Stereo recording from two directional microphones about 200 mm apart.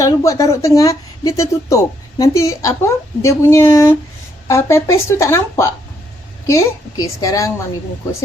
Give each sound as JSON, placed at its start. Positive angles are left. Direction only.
{"t": 0.0, "sound": "speech", "side_deg": 15}